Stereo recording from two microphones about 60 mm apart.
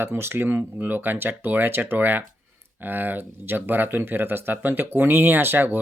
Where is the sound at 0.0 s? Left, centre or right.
Right.